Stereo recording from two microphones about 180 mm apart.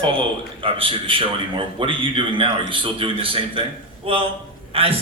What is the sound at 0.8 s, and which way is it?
A man's voice, 30° right (ahead or behind).